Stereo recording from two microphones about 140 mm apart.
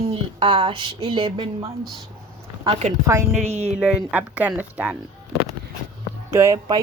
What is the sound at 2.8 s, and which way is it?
Speech, 50° right (ahead or behind).